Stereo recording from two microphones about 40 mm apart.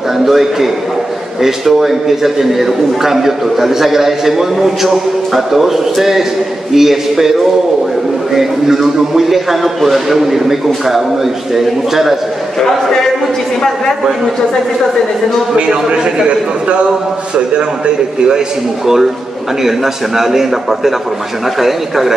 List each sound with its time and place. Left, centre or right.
0.2 s a man's voice: centre
8.4 s a man's voice: centre
12.5 s speech: centre
15.5 s a man's voice: right
17.6 s a man's voice: right
19.6 s a man's voice: centre